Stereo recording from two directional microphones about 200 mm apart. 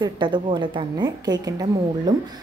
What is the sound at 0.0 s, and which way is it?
A woman's voice, 25° right (ahead or behind).